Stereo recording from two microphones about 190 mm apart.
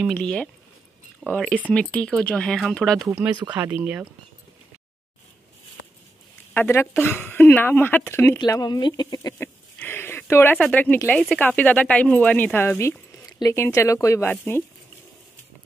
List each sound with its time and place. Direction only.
0.0 s speech: 5° left (ahead or behind)
3.1 s speech: 10° right (ahead or behind)
6.5 s speech: 10° left (ahead or behind)